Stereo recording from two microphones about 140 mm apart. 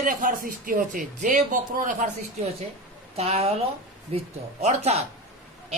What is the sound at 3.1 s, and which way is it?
Music, 45° right (ahead or behind).